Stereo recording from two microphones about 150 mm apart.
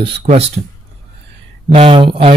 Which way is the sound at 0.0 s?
45° right (ahead or behind).